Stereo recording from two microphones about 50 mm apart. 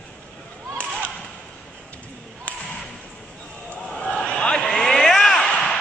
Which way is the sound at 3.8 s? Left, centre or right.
Centre.